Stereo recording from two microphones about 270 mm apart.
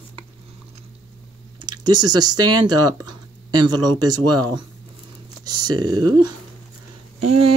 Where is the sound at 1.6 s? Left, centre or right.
Right.